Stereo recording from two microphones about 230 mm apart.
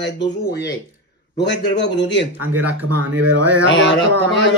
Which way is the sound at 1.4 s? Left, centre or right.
Left.